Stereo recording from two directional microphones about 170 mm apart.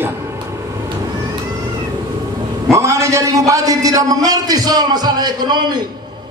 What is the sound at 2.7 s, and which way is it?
A man's voice, 15° right (ahead or behind).